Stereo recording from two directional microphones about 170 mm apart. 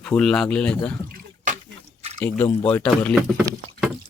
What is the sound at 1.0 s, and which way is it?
Drip, 55° right (ahead or behind).